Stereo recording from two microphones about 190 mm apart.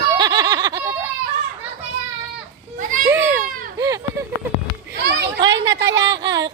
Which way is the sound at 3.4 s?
45° right (ahead or behind).